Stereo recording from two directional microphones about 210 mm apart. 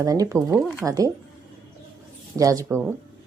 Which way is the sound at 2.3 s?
15° right (ahead or behind).